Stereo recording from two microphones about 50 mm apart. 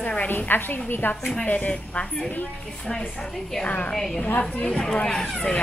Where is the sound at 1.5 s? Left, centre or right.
Left.